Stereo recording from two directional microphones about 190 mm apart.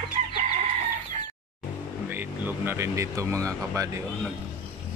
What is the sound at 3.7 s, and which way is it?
Speech, 15° right (ahead or behind).